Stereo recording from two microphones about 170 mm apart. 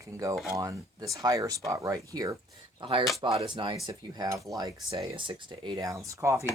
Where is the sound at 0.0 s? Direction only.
20° right (ahead or behind).